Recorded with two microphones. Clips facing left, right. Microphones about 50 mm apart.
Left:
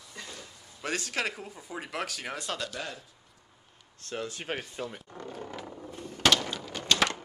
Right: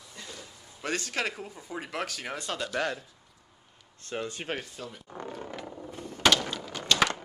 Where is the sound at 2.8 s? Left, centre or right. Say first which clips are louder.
Right 8 dB; right.